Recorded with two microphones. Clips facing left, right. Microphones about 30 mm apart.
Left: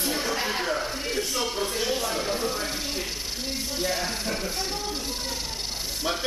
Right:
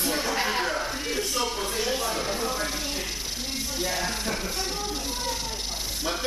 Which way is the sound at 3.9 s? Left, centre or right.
Left.